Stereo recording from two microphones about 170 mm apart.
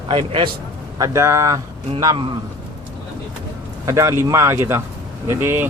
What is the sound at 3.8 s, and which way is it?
Speech, 15° right (ahead or behind).